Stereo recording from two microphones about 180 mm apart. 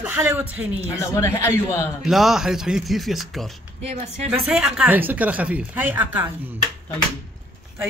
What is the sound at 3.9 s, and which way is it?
Speech, 40° right (ahead or behind).